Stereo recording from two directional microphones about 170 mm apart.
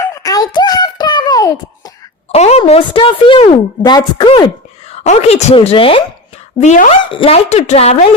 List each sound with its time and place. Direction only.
0.1 s a sound: 20° left (ahead or behind)
2.3 s a woman's voice: 40° left (ahead or behind)
4.9 s a woman's voice: 40° left (ahead or behind)
6.6 s speech: 45° left (ahead or behind)
7.0 s a woman's voice: 30° left (ahead or behind)